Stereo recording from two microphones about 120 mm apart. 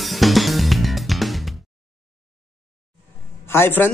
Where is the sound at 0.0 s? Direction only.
Centre (ahead or behind).